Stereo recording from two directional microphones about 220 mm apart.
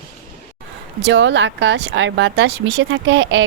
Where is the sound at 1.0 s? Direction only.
55° right (ahead or behind).